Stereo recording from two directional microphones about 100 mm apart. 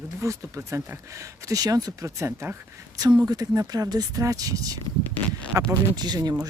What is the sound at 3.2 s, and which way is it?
Speech, 35° right (ahead or behind).